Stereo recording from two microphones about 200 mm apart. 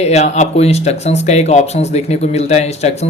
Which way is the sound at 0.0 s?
35° left (ahead or behind).